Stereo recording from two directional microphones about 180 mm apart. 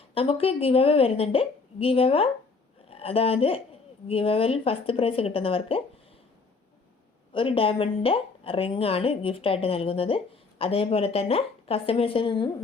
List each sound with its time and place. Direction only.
0.1 s speech: 30° left (ahead or behind)
7.3 s speech: 30° left (ahead or behind)